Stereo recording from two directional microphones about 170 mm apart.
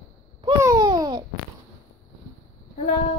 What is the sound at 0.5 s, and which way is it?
Babbling, 20° right (ahead or behind).